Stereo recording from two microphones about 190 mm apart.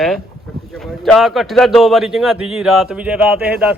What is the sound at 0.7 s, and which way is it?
A man's voice, centre (ahead or behind).